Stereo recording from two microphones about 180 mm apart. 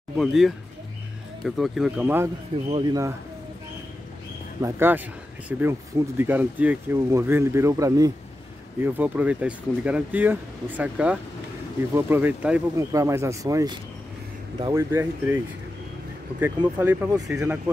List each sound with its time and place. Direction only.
0.2 s speech: centre (ahead or behind)
2.7 s speech: 20° right (ahead or behind)
4.6 s speech: 15° right (ahead or behind)